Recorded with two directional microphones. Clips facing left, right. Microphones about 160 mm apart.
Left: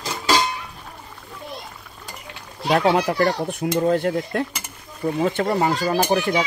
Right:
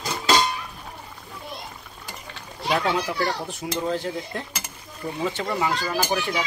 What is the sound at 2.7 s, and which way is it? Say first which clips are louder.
A child's voice: left 6 dB; 50° left (ahead or behind).